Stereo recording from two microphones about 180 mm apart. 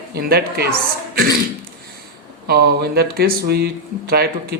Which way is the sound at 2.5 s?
60° right (ahead or behind).